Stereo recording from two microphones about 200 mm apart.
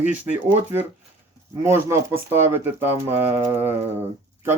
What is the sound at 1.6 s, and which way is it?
Speech, 10° right (ahead or behind).